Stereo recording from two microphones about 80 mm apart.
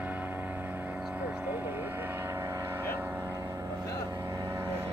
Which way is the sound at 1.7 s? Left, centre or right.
Right.